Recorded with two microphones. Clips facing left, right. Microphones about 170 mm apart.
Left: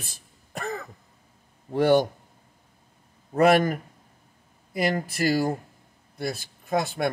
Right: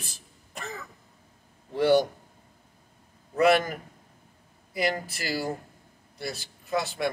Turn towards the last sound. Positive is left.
turn(degrees=50)  # may be behind; listen again after turning